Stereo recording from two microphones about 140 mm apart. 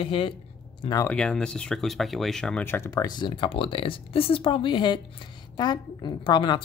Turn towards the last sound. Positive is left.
turn(degrees=35)  # may be behind; listen again after turning